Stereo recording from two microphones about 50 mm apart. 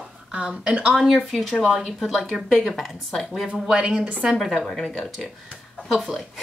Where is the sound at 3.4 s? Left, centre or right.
Centre.